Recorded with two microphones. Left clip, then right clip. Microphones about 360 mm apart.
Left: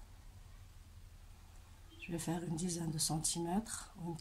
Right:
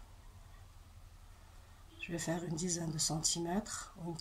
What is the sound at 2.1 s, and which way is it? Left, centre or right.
Speech, centre.